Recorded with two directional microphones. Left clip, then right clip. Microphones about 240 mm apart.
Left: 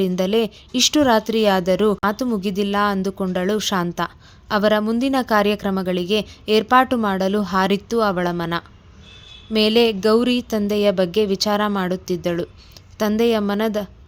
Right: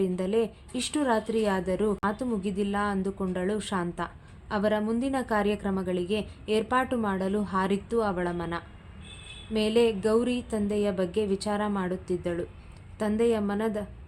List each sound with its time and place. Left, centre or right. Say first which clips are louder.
0.0 s speech: left 8 dB; left